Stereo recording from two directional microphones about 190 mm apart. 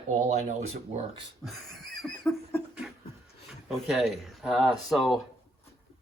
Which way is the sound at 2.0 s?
Centre (ahead or behind).